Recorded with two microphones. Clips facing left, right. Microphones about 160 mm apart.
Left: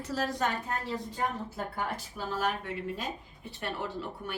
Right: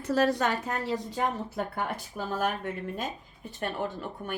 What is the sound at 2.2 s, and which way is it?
A woman's voice, 40° right (ahead or behind).